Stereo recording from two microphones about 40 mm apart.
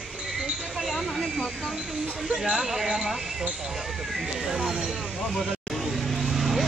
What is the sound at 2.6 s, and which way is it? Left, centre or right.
Speech, centre.